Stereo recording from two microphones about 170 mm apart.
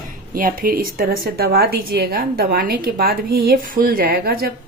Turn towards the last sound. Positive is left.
turn(degrees=-65)  # may be behind; listen again after turning